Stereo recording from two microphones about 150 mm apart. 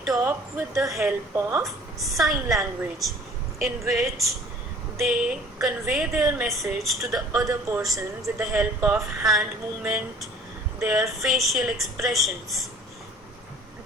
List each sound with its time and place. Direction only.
0.2 s speech: 15° right (ahead or behind)
0.8 s a woman's voice: 5° right (ahead or behind)
1.4 s speech: 15° right (ahead or behind)
1.6 s a woman's voice: centre (ahead or behind)
7.4 s speech: 20° right (ahead or behind)
8.5 s a woman's voice: 5° right (ahead or behind)